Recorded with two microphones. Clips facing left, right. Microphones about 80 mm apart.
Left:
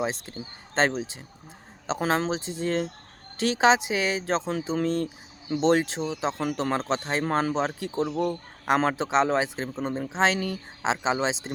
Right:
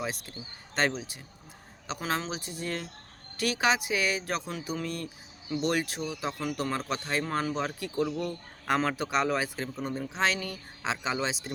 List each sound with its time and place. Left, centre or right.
0.0 s a man's voice: left